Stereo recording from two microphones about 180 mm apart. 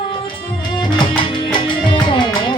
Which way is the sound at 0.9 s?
25° left (ahead or behind).